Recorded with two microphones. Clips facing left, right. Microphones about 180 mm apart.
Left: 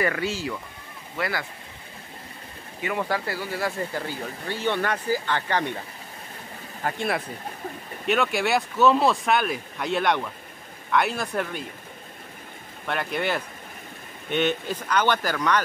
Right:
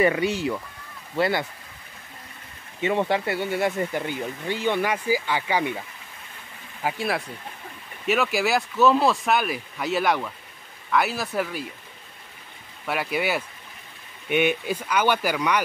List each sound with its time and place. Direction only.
0.0 s speech: 20° right (ahead or behind)
2.8 s speech: 25° right (ahead or behind)
6.8 s speech: 5° right (ahead or behind)
12.8 s speech: 5° right (ahead or behind)